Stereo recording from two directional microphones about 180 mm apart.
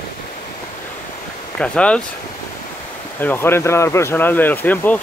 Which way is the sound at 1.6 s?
5° left (ahead or behind).